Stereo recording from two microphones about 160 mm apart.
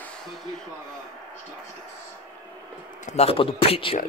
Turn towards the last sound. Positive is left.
turn(degrees=35)  # may be behind; listen again after turning